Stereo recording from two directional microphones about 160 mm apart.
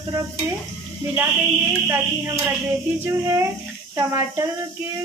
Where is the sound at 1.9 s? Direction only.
15° right (ahead or behind).